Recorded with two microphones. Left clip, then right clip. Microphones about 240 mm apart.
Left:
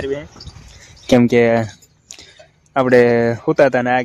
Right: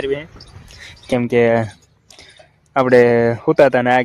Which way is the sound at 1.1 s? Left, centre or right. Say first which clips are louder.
Left 6 dB; left.